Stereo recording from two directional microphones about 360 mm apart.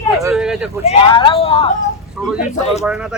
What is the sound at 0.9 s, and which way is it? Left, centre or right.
Speech, centre.